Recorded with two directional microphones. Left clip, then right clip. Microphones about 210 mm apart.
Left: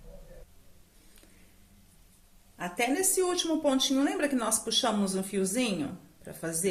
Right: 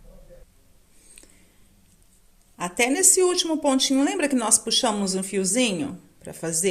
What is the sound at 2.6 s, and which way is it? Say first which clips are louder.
A woman's voice: right 7 dB; 40° right (ahead or behind).